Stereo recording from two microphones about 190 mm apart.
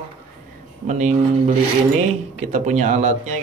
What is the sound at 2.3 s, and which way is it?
A man's voice, 35° right (ahead or behind).